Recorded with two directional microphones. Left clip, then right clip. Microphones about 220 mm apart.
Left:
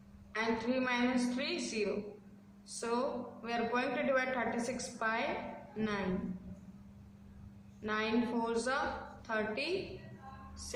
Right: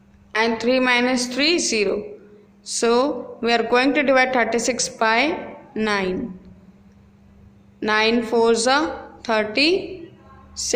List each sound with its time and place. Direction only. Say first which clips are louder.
0.3 s speech: right 16 dB; 40° right (ahead or behind)
7.8 s speech: right 16 dB; 40° right (ahead or behind)